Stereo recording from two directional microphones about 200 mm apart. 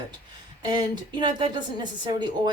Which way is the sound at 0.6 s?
20° right (ahead or behind).